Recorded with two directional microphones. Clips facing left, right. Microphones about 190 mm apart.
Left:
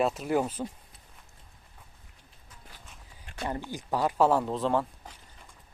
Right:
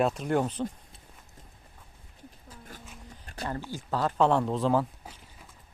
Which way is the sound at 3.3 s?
40° right (ahead or behind).